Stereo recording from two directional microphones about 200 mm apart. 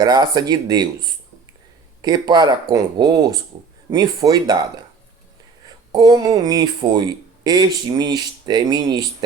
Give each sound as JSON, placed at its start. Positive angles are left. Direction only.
{"t": 0.0, "sound": "speech", "side_deg": -20}
{"t": 5.6, "sound": "speech", "side_deg": -20}